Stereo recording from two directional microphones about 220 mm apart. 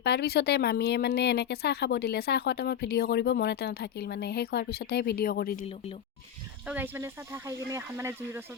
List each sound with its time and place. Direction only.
0.0 s speech: 50° left (ahead or behind)
6.7 s speech: 10° right (ahead or behind)